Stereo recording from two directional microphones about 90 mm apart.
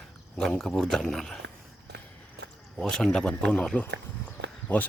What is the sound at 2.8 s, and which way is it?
Speech, 5° left (ahead or behind).